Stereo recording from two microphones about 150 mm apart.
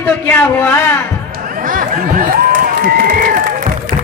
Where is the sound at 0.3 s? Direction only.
10° left (ahead or behind).